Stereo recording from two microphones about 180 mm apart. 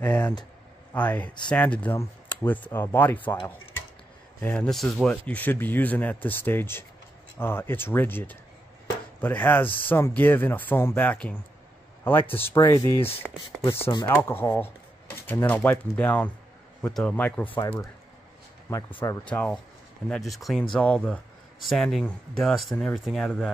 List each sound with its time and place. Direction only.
0.0 s speech: 5° left (ahead or behind)
4.4 s speech: 5° left (ahead or behind)
18.7 s speech: 15° left (ahead or behind)